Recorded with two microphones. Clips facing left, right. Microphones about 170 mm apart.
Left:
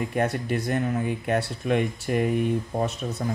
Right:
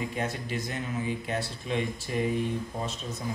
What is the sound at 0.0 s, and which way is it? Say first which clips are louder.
Speech: left 7 dB; 55° left (ahead or behind).